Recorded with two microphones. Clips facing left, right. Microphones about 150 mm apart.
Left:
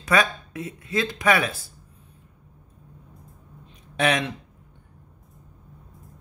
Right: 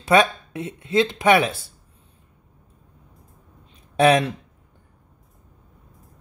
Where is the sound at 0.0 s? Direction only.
25° right (ahead or behind).